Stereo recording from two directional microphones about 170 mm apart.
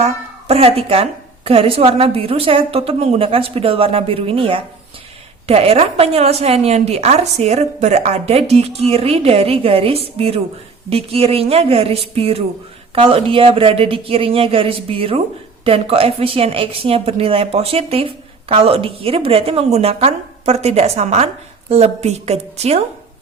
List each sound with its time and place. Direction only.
0.4 s a woman's voice: 35° right (ahead or behind)